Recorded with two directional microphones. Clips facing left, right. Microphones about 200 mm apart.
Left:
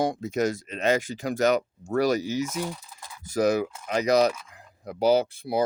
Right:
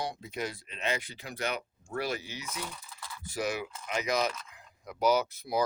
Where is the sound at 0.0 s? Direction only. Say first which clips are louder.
Left 11 dB; 45° left (ahead or behind).